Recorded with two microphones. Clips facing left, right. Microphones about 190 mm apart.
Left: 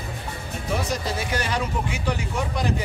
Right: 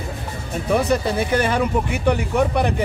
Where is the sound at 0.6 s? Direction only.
60° right (ahead or behind).